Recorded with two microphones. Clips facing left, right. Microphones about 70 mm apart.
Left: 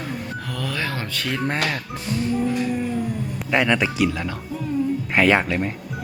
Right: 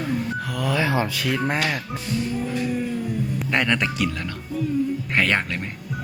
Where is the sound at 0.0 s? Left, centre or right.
Centre.